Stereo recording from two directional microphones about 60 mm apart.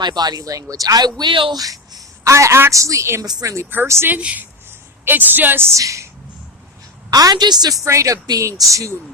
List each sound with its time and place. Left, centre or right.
0.3 s speech: right
2.3 s a woman's voice: right
4.1 s speech: right
5.7 s a woman's voice: right
7.1 s a woman's voice: right
7.9 s a woman's voice: right